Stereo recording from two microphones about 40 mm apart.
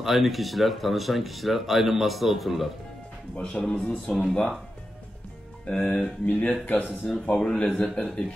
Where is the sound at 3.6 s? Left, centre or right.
Left.